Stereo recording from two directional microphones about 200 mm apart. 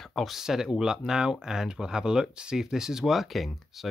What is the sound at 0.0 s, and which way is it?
Speech, centre (ahead or behind).